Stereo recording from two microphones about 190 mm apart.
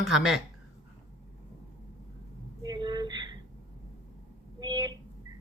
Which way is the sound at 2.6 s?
20° right (ahead or behind).